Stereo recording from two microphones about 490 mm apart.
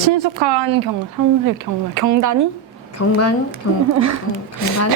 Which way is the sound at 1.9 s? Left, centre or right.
Right.